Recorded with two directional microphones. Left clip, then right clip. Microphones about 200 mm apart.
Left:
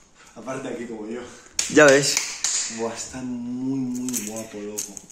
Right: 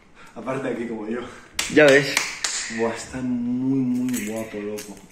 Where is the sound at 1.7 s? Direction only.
35° left (ahead or behind).